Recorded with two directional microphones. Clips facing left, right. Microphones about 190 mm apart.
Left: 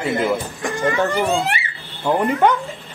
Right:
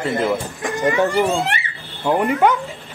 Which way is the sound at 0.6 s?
20° right (ahead or behind).